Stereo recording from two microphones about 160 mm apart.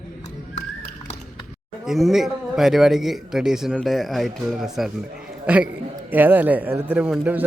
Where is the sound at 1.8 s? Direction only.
Centre (ahead or behind).